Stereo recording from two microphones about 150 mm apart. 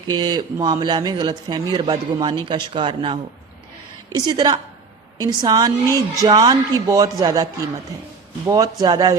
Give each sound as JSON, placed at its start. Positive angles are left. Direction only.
{"t": 0.1, "sound": "speech", "side_deg": -30}
{"t": 8.4, "sound": "speech", "side_deg": -25}